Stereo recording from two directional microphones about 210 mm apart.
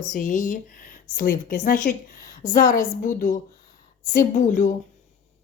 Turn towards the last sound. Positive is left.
turn(degrees=40)  # may be behind; listen again after turning